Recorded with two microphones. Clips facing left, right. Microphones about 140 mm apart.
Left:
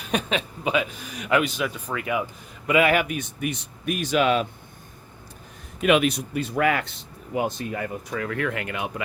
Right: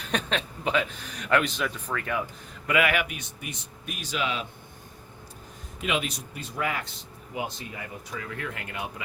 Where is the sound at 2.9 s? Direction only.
45° left (ahead or behind).